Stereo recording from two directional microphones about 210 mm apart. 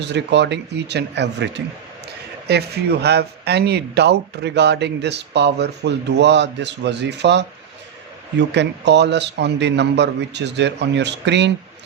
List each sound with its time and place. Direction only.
0.0 s a man's voice: 55° right (ahead or behind)